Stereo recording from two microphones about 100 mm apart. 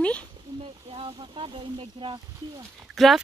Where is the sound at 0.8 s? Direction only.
70° right (ahead or behind).